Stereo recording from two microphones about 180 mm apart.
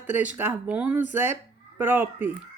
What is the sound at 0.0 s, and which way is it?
A woman's voice, 10° right (ahead or behind).